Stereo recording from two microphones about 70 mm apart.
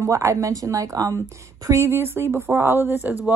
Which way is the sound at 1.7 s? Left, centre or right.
Right.